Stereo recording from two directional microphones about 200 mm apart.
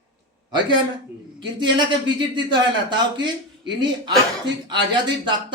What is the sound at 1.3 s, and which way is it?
Speech, 25° right (ahead or behind).